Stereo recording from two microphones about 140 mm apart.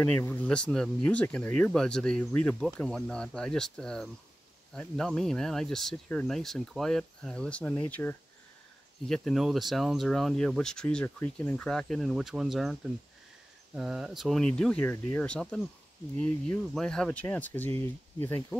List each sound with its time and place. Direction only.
0.0 s speech: 15° left (ahead or behind)
9.1 s speech: centre (ahead or behind)
13.7 s speech: 5° right (ahead or behind); by 18.4 s 15° left (ahead or behind)